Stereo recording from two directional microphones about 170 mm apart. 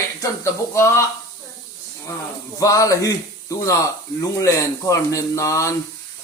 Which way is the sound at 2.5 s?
20° left (ahead or behind).